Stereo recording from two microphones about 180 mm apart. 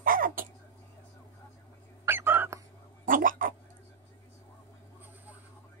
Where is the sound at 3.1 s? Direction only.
50° right (ahead or behind).